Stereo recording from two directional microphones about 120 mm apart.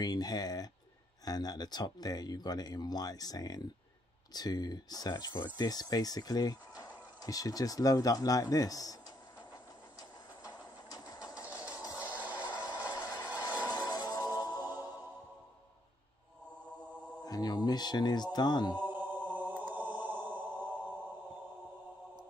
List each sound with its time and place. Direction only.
0.0 s speech: 30° left (ahead or behind)
10.4 s train: 30° left (ahead or behind)
11.4 s a sound: 10° right (ahead or behind)
12.0 s music: 15° right (ahead or behind)
12.6 s music: 35° left (ahead or behind)
17.2 s speech: 35° left (ahead or behind)
18.8 s music: 15° right (ahead or behind)
19.3 s mantra: 15° right (ahead or behind)